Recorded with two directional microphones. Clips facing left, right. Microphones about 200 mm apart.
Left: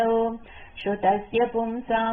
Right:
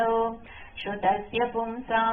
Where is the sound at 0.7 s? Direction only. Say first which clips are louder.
Left 4 dB; 35° left (ahead or behind).